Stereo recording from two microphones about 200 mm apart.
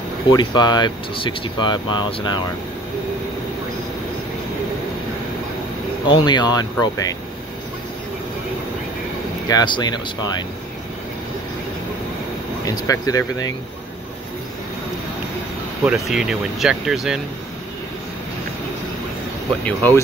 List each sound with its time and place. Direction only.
0.3 s speech: 20° left (ahead or behind)
6.0 s speech: 20° left (ahead or behind)
9.5 s speech: 20° left (ahead or behind)
12.6 s speech: 15° left (ahead or behind)
15.8 s speech: 5° right (ahead or behind)
19.6 s speech: 10° left (ahead or behind)